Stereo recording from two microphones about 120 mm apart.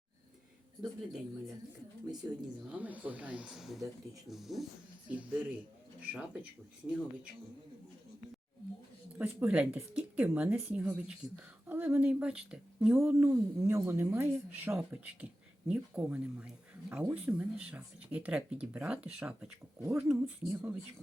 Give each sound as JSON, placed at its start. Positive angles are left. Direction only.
{"t": 0.8, "sound": "speech", "side_deg": 0}
{"t": 2.7, "sound": "speech", "side_deg": -10}
{"t": 9.1, "sound": "speech", "side_deg": -15}
{"t": 12.9, "sound": "speech", "side_deg": -20}